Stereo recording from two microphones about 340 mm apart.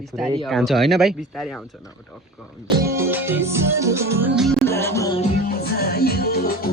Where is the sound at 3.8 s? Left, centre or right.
Centre.